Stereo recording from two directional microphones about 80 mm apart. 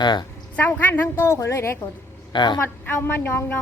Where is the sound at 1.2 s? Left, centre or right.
Left.